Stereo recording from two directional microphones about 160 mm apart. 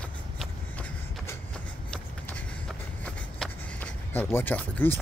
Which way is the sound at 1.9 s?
10° left (ahead or behind).